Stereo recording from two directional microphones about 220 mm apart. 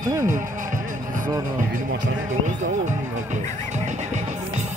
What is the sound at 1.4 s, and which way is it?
Speech, 35° right (ahead or behind).